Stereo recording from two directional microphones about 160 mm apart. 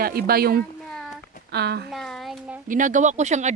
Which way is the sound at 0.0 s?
70° right (ahead or behind).